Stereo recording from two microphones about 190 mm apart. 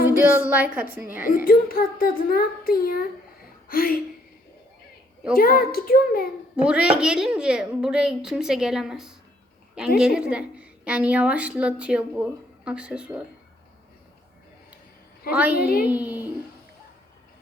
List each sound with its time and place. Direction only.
0.4 s a woman's voice: 10° right (ahead or behind)
1.2 s a child's voice: 50° left (ahead or behind)
5.3 s a child's voice: 50° left (ahead or behind)
6.6 s a woman's voice: 5° right (ahead or behind)
15.3 s a woman's voice: 10° right (ahead or behind)
15.5 s a child's voice: 50° left (ahead or behind)
15.9 s a woman's voice: 10° right (ahead or behind)